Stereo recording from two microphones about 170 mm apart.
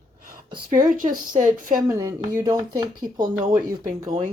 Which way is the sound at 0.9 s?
55° right (ahead or behind).